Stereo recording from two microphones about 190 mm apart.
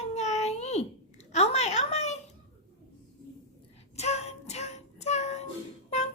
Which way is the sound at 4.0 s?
35° left (ahead or behind).